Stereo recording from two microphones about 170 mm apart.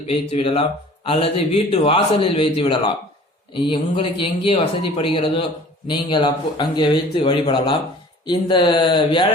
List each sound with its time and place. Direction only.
0.1 s speech: 35° left (ahead or behind)